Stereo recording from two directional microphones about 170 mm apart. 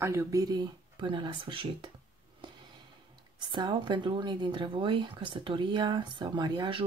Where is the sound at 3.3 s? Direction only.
25° right (ahead or behind).